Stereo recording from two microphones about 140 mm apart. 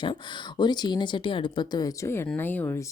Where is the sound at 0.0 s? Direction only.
35° left (ahead or behind).